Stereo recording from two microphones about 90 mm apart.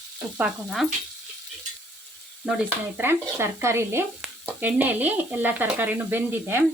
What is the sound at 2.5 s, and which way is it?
Sizzle, 10° right (ahead or behind).